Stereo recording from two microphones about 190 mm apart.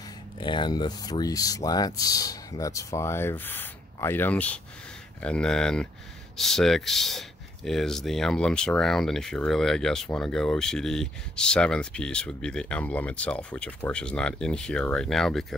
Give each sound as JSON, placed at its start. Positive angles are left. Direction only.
{"t": 0.4, "sound": "speech", "side_deg": 25}